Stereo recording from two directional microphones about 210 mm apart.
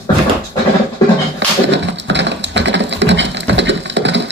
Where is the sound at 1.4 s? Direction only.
55° right (ahead or behind).